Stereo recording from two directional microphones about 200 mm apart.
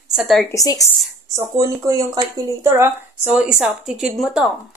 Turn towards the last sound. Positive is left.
turn(degrees=0)  # may be behind; listen again after turning